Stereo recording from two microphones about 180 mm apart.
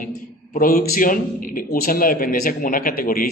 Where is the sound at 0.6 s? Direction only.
55° left (ahead or behind).